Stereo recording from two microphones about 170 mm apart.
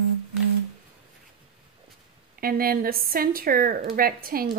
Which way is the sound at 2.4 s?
60° right (ahead or behind).